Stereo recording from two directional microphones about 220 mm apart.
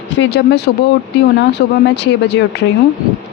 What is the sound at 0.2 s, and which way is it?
Speech, 50° left (ahead or behind).